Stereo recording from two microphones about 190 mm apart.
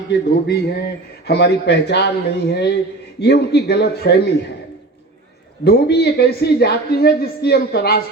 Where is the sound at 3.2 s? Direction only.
60° left (ahead or behind).